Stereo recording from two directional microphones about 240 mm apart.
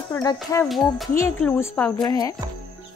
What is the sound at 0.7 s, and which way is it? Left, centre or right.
A woman's voice, centre.